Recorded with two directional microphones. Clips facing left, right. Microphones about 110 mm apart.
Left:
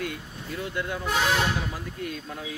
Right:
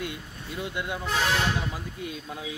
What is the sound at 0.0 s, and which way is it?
Speech, 15° right (ahead or behind).